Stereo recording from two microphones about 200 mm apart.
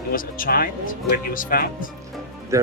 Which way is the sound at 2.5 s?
15° right (ahead or behind).